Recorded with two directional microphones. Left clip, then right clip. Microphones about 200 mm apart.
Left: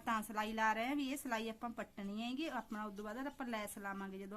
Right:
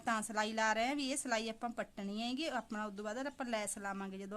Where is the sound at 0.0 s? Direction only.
40° right (ahead or behind).